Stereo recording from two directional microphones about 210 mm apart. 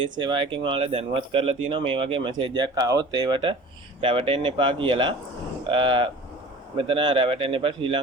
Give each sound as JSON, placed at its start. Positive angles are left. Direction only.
{"t": 0.0, "sound": "speech", "side_deg": -20}